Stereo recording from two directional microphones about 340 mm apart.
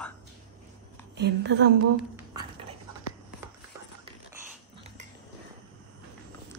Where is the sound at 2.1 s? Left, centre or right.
Centre.